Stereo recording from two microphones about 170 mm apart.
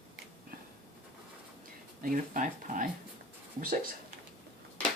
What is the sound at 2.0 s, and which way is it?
Speech, 55° right (ahead or behind).